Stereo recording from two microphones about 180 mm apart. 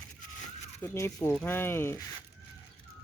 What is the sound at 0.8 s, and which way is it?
Speech, 15° left (ahead or behind).